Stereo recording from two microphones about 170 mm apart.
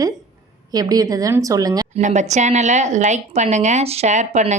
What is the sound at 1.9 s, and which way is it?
A woman's voice, 45° right (ahead or behind).